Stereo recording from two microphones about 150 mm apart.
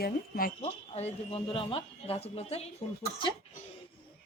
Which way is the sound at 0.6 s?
40° left (ahead or behind).